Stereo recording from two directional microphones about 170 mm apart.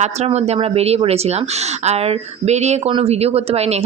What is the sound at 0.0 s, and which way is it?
Speech, 40° right (ahead or behind).